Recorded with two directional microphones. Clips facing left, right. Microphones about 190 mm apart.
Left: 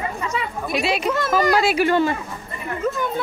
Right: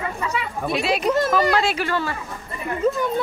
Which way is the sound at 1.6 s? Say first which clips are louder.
Left 6 dB; 15° left (ahead or behind).